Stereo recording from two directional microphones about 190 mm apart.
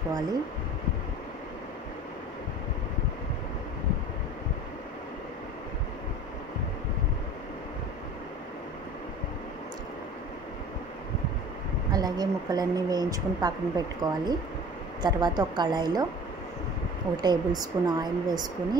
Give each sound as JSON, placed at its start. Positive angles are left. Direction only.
{"t": 11.9, "sound": "a woman's voice", "side_deg": -20}
{"t": 17.2, "sound": "speech", "side_deg": -20}